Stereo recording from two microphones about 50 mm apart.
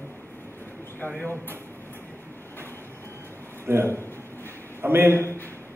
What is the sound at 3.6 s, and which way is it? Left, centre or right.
A man's voice, right.